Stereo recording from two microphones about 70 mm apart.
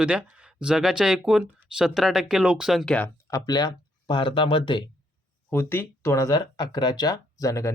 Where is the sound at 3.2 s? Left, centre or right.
Left.